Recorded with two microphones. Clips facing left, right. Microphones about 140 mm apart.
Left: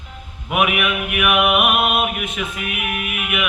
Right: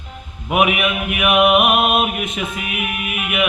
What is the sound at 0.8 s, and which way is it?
Music, 30° right (ahead or behind).